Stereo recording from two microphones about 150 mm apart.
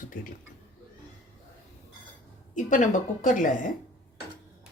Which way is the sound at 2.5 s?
55° left (ahead or behind).